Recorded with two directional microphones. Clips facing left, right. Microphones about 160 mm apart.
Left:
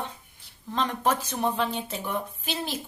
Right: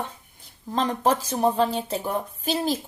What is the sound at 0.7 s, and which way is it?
A woman's voice, 35° right (ahead or behind).